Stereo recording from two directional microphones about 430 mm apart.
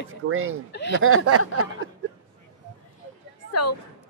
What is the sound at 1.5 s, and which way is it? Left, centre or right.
Speech, right.